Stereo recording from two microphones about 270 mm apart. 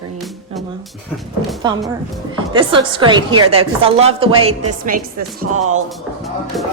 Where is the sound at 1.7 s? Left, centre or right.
Centre.